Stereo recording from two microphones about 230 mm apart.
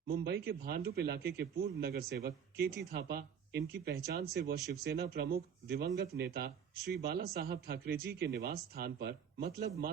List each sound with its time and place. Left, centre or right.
0.1 s a man's voice: right